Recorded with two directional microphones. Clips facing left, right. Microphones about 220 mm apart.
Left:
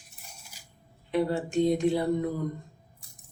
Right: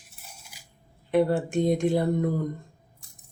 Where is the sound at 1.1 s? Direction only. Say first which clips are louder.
Right 4 dB; 50° right (ahead or behind).